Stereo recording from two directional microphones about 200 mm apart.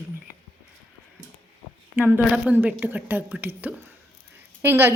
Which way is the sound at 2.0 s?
10° right (ahead or behind).